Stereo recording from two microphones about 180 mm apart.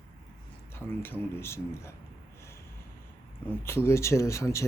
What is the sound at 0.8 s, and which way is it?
Speech, 10° left (ahead or behind).